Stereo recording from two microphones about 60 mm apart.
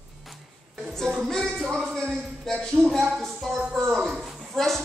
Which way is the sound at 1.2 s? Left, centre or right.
Centre.